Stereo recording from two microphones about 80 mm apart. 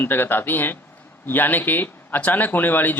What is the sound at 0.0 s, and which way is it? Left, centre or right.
Speech, left.